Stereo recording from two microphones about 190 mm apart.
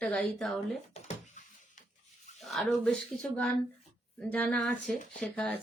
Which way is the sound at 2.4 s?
Centre (ahead or behind).